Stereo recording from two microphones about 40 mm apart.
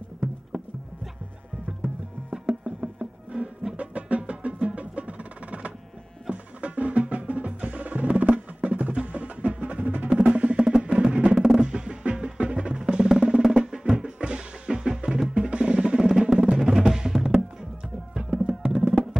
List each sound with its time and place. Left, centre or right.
2.5 s music: right
3.7 s music: right
10.0 s music: right
11.3 s music: centre
11.6 s music: right
13.8 s music: right
16.0 s music: centre